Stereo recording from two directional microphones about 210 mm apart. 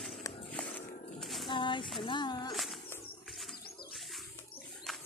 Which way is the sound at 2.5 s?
Centre (ahead or behind).